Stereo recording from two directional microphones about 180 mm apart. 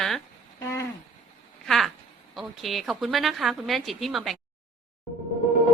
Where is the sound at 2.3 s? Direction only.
Centre (ahead or behind).